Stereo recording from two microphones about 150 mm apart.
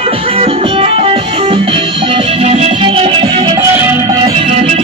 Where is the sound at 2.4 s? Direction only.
45° right (ahead or behind).